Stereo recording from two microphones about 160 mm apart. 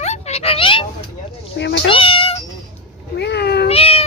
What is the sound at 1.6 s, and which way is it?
Speech, 90° left.